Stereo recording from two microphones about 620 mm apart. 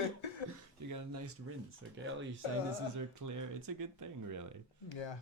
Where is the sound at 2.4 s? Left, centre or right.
Left.